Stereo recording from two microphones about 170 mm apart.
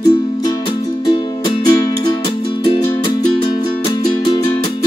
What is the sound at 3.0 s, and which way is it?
Music, 25° left (ahead or behind).